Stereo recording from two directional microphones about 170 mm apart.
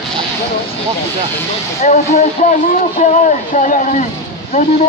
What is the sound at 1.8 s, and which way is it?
Speech, 45° left (ahead or behind).